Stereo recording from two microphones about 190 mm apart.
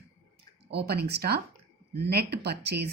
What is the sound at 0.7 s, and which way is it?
A woman's voice, 60° right (ahead or behind).